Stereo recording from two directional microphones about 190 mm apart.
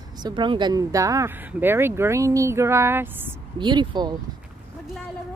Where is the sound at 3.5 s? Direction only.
25° right (ahead or behind).